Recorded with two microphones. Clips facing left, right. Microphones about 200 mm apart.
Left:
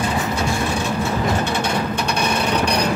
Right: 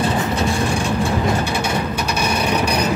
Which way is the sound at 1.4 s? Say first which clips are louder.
Even; 5° right (ahead or behind).